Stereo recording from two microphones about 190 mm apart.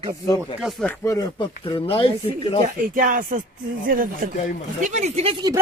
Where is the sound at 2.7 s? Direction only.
45° right (ahead or behind).